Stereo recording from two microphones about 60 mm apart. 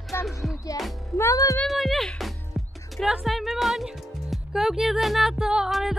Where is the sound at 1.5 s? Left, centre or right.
Centre.